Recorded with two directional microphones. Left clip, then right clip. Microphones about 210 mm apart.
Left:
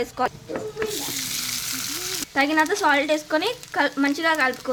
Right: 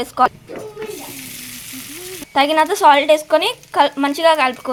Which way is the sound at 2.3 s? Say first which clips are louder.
Right 6 dB; 20° right (ahead or behind).